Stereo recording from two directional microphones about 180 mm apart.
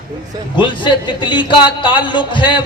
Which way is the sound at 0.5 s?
25° left (ahead or behind).